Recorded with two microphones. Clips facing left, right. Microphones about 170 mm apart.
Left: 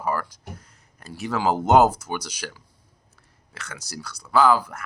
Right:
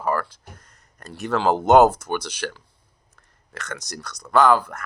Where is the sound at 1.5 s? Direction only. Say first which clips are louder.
Right 3 dB; 65° right (ahead or behind).